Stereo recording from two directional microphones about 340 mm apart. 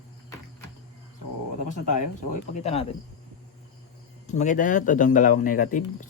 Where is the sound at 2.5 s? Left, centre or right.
Centre.